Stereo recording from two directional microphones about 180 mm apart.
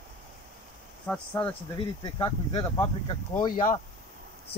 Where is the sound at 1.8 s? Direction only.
25° left (ahead or behind).